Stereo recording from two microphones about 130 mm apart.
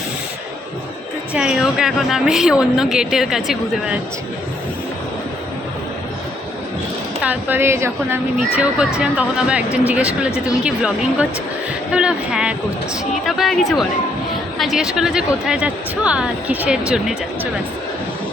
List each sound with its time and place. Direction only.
1.3 s a woman's voice: 5° right (ahead or behind)
7.2 s a woman's voice: 15° right (ahead or behind)